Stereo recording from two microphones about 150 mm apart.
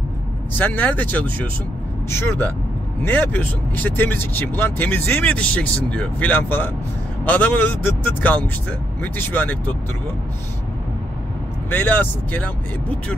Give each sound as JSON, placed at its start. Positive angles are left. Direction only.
{"t": 0.6, "sound": "speech", "side_deg": 10}
{"t": 11.7, "sound": "speech", "side_deg": 10}